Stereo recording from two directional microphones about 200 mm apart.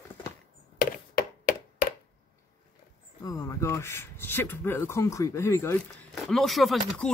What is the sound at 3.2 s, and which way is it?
Speech, 15° left (ahead or behind).